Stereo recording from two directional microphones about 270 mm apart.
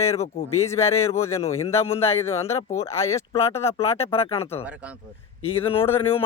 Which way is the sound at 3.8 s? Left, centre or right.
Left.